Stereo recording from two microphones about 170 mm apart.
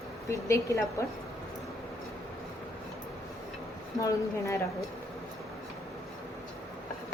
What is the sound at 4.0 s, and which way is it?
Speech, 20° left (ahead or behind).